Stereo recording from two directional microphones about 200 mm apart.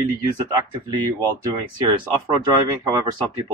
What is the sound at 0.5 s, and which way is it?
Speech, 20° right (ahead or behind).